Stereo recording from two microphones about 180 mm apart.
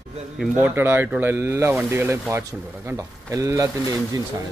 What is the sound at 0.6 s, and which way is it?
Speech, 10° right (ahead or behind).